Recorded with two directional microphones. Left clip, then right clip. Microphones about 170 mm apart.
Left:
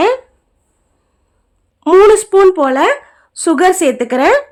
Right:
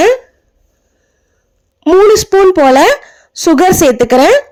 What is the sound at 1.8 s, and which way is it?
Speech, 5° right (ahead or behind).